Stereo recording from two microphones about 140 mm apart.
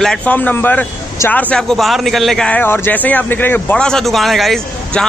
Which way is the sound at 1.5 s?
Centre (ahead or behind).